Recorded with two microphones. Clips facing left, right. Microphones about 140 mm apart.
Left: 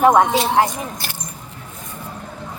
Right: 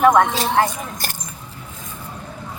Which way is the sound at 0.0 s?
20° left (ahead or behind).